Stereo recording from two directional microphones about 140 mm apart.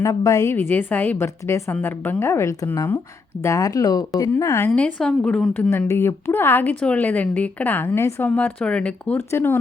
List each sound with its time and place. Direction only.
0.0 s a woman's voice: 25° left (ahead or behind)
0.5 s a woman's voice: 15° left (ahead or behind)
5.9 s a woman's voice: 15° left (ahead or behind)